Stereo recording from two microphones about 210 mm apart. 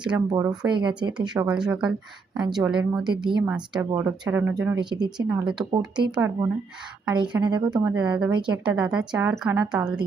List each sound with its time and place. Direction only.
0.1 s speech: 5° right (ahead or behind)
1.2 s a woman's voice: 20° right (ahead or behind)
1.5 s speech: 5° right (ahead or behind)
4.8 s a woman's voice: 20° right (ahead or behind)
5.5 s speech: centre (ahead or behind)
6.1 s a woman's voice: 15° right (ahead or behind)
7.9 s speech: 5° right (ahead or behind)
8.3 s a woman's voice: 20° right (ahead or behind)
8.7 s speech: 5° right (ahead or behind)